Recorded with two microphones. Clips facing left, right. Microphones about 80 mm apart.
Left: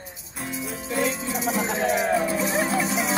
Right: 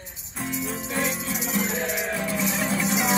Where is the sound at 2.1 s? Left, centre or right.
Left.